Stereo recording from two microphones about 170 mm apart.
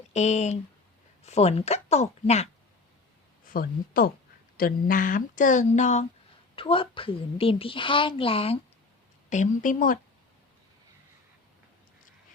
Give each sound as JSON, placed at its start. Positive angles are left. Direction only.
{"t": 0.1, "sound": "a woman's voice", "side_deg": 40}
{"t": 3.4, "sound": "speech", "side_deg": 55}
{"t": 6.6, "sound": "a woman's voice", "side_deg": 30}
{"t": 9.3, "sound": "speech", "side_deg": 45}